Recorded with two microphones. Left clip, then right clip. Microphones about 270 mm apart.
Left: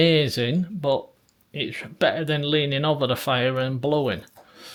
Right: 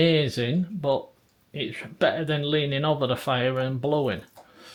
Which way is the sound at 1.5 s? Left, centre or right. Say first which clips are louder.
Left 2 dB; centre.